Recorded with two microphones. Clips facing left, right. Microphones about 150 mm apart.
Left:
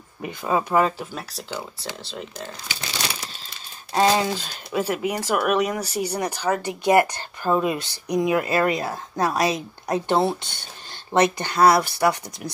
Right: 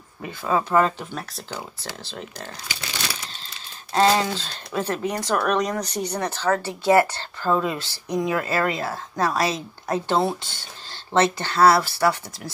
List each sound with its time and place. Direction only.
0.2 s speech: 20° left (ahead or behind); by 2.5 s centre (ahead or behind)
3.9 s speech: 15° left (ahead or behind)